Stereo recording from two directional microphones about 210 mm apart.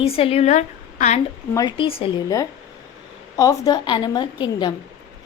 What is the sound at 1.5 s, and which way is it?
A woman's voice, 25° left (ahead or behind).